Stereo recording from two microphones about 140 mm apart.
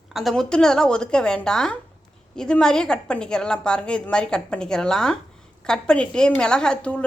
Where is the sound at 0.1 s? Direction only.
Centre (ahead or behind).